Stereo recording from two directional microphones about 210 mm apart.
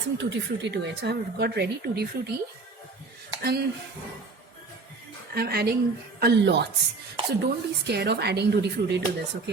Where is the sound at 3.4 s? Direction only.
50° right (ahead or behind).